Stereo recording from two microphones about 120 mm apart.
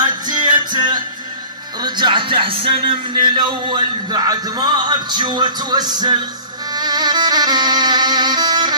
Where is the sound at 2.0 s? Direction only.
40° right (ahead or behind).